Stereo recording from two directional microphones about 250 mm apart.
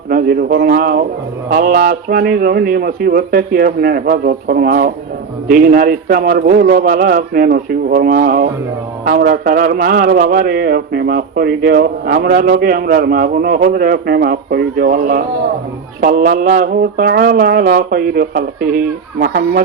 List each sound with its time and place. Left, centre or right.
0.1 s a man's voice: right